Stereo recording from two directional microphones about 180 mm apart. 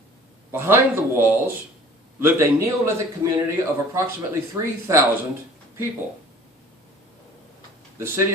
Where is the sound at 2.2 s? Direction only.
15° right (ahead or behind).